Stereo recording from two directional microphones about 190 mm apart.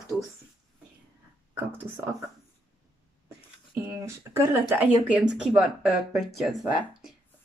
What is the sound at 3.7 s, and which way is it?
Speech, 15° right (ahead or behind).